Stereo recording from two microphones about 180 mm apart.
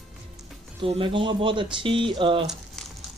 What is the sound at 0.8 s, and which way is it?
Speech, 30° right (ahead or behind).